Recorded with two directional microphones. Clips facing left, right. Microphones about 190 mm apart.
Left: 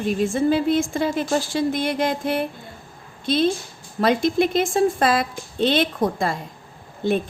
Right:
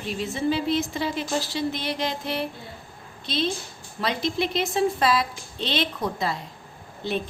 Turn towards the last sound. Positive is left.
turn(degrees=50)  # may be behind; listen again after turning